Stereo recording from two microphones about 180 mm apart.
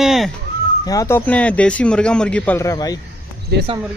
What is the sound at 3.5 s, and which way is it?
Speech, 65° right (ahead or behind).